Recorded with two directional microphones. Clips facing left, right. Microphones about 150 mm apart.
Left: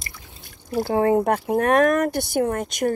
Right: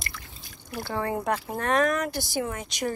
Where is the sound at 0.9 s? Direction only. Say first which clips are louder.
Left 9 dB; 55° left (ahead or behind).